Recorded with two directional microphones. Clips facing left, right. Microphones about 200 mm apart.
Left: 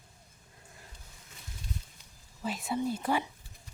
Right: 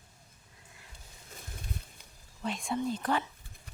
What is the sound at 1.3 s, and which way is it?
Boat, 55° right (ahead or behind).